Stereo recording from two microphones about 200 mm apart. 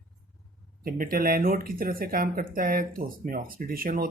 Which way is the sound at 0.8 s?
45° right (ahead or behind).